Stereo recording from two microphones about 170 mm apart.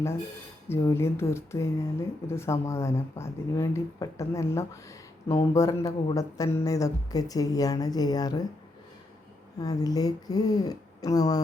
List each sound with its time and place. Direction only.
0.7 s speech: 15° left (ahead or behind)
9.6 s speech: 20° left (ahead or behind)